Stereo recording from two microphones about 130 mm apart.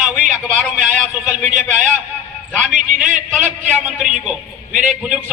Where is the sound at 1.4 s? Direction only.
75° right (ahead or behind).